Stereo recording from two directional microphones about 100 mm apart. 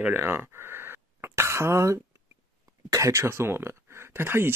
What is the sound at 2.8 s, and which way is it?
Speech, 30° right (ahead or behind).